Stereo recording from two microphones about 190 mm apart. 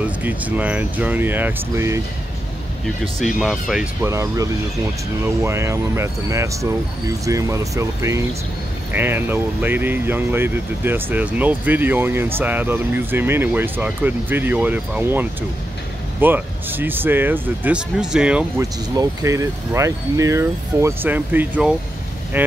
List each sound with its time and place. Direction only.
0.2 s speech: 10° right (ahead or behind)
3.3 s speech: centre (ahead or behind)
4.0 s speech: 15° right (ahead or behind)
18.6 s speech: 15° right (ahead or behind)